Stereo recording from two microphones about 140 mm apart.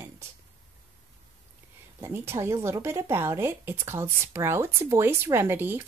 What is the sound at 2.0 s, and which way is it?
Speech, 20° right (ahead or behind).